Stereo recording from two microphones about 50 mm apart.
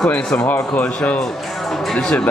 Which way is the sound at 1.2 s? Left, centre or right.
Centre.